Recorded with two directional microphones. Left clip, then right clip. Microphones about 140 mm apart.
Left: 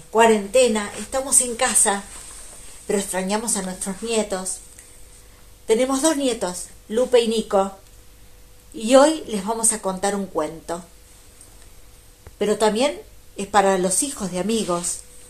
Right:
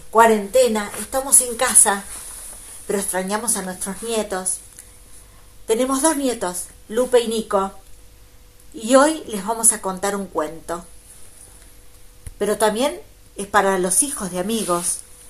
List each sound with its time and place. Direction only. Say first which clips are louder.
0.1 s a woman's voice: right 2 dB; 10° left (ahead or behind)
2.9 s a woman's voice: even; 15° left (ahead or behind)
5.7 s a woman's voice: even; 5° left (ahead or behind)
8.7 s a woman's voice: even; 10° left (ahead or behind)
12.4 s a woman's voice: even; 10° left (ahead or behind)